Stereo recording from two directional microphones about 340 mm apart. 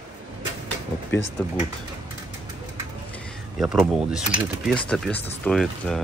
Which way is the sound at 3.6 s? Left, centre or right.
Centre.